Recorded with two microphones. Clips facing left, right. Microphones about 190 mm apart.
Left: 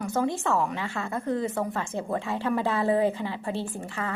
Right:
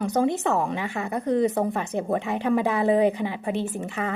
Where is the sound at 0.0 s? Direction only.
20° right (ahead or behind).